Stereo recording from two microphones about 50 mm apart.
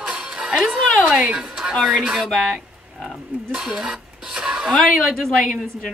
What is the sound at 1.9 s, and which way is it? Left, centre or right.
Speech, centre.